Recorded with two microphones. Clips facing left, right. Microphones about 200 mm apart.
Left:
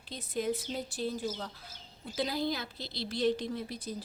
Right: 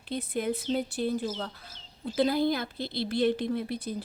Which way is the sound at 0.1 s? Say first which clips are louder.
Right 3 dB; 60° right (ahead or behind).